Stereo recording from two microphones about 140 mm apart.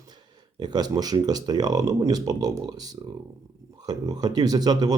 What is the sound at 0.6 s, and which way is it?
Speech, 30° right (ahead or behind).